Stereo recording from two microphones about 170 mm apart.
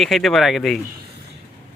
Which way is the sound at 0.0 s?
Centre (ahead or behind).